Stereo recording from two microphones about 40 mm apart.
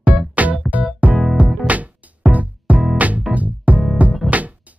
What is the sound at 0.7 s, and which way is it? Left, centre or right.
Music, right.